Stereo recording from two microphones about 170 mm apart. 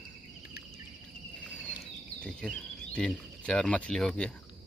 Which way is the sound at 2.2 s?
5° left (ahead or behind).